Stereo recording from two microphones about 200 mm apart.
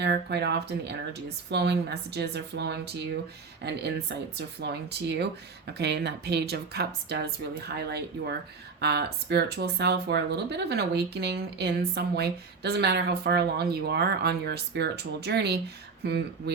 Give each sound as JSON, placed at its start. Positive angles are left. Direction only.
{"t": 0.0, "sound": "speech", "side_deg": -55}